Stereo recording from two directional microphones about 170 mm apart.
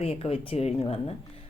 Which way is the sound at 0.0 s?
35° left (ahead or behind).